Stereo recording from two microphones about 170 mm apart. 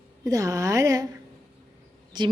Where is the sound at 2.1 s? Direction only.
25° right (ahead or behind).